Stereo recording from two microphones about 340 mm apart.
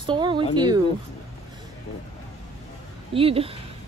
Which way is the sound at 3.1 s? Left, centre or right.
Centre.